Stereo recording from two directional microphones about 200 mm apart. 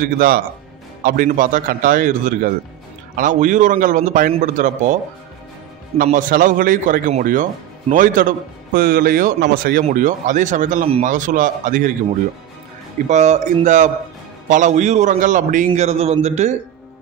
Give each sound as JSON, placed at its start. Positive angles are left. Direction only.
{"t": 0.0, "sound": "a man's voice", "side_deg": -45}
{"t": 5.9, "sound": "a man's voice", "side_deg": -40}
{"t": 13.1, "sound": "a man's voice", "side_deg": -35}